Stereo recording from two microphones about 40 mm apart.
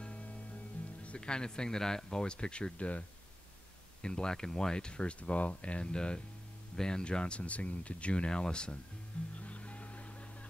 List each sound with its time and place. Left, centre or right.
0.0 s music: left
1.0 s speech: left
2.2 s speech: left
4.0 s speech: left
9.3 s music: left